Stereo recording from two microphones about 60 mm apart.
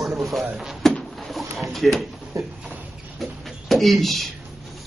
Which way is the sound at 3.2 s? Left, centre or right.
Centre.